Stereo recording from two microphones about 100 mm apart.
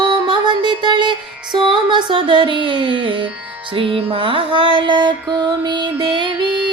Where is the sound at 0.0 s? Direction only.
50° right (ahead or behind).